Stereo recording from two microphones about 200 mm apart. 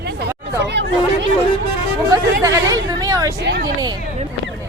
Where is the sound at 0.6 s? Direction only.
60° right (ahead or behind).